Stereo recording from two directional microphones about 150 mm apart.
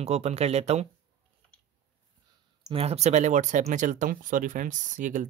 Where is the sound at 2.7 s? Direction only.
45° right (ahead or behind).